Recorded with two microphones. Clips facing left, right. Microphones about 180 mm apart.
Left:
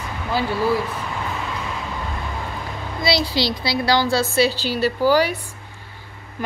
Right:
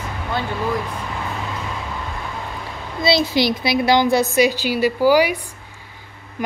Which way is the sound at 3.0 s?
20° right (ahead or behind).